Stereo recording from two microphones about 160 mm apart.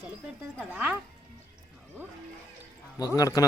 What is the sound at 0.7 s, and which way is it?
Speech, 10° right (ahead or behind).